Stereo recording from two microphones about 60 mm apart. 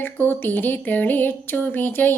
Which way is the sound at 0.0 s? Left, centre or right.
Left.